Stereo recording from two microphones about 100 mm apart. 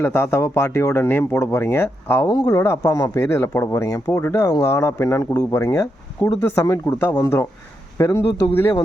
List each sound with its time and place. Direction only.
0.0 s speech: 25° left (ahead or behind)
2.2 s speech: 40° left (ahead or behind)